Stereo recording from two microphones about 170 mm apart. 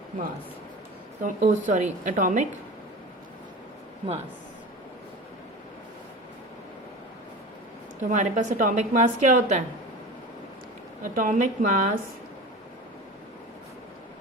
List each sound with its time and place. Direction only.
1.2 s a woman's voice: 45° right (ahead or behind)
4.0 s speech: 40° right (ahead or behind)
8.1 s a woman's voice: 45° right (ahead or behind)
11.0 s a woman's voice: 50° right (ahead or behind)